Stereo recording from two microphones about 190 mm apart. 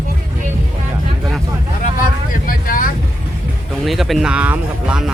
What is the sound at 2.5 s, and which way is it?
Speech, 45° left (ahead or behind).